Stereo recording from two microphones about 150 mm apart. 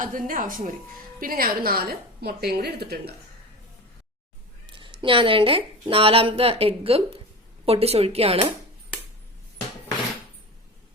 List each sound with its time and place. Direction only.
0.0 s a woman's voice: 65° right (ahead or behind); by 3.1 s 90° right
4.6 s a woman's voice: 35° right (ahead or behind)